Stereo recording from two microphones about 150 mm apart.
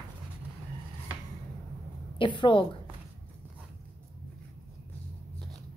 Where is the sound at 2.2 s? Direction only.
35° left (ahead or behind).